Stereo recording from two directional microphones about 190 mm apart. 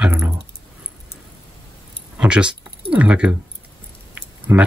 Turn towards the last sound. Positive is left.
turn(degrees=-10)  # may be behind; listen again after turning